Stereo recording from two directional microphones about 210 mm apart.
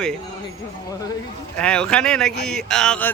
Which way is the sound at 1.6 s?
5° left (ahead or behind).